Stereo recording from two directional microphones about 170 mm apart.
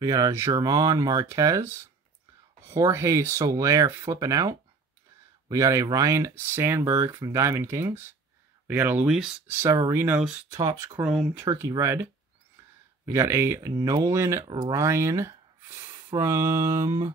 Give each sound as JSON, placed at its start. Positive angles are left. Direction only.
{"t": 0.0, "sound": "speech", "side_deg": -20}
{"t": 9.5, "sound": "speech", "side_deg": -15}
{"t": 10.5, "sound": "speech", "side_deg": -20}
{"t": 11.1, "sound": "speech", "side_deg": 0}
{"t": 11.4, "sound": "speech", "side_deg": -20}